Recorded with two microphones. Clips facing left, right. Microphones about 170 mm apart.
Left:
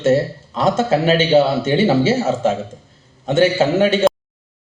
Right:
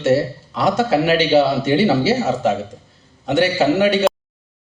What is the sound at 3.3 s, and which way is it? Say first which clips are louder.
Speech: left 1 dB; 25° left (ahead or behind).